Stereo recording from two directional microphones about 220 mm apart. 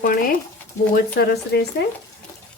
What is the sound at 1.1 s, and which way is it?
Speech, 45° left (ahead or behind).